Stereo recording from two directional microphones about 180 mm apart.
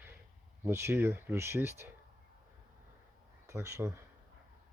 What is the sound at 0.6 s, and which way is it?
Speech, 15° right (ahead or behind).